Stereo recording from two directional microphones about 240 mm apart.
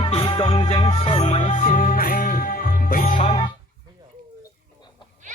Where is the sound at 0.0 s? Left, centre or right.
Left.